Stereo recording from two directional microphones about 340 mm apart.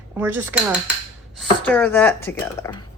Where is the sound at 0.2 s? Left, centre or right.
Centre.